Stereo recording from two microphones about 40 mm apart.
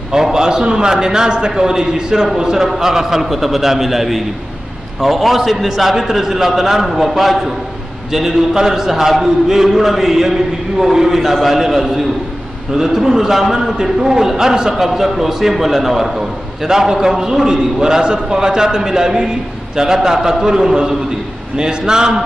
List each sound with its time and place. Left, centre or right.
0.1 s a man's voice: centre